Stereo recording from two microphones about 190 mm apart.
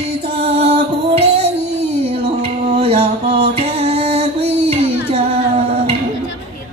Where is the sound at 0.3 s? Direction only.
35° right (ahead or behind).